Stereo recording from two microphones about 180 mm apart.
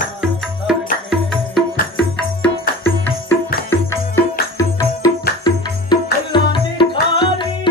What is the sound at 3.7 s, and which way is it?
Music, 15° left (ahead or behind).